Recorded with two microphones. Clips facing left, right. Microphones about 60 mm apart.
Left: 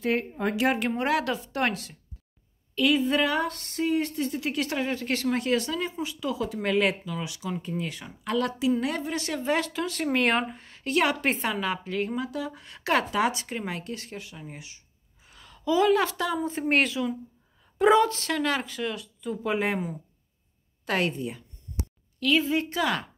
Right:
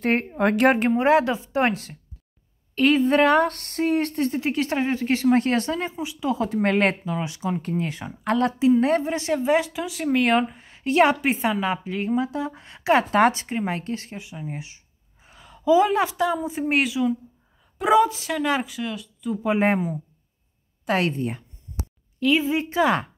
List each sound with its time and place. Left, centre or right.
0.0 s speech: right
0.3 s a woman's voice: right
0.7 s a woman's voice: right
2.7 s speech: right
4.3 s a woman's voice: right
5.4 s speech: right
5.9 s speech: centre
6.2 s a woman's voice: right; by 10.6 s centre
10.6 s speech: centre
11.1 s a woman's voice: centre
16.3 s a woman's voice: centre
18.8 s speech: centre
21.2 s speech: right
22.2 s a woman's voice: centre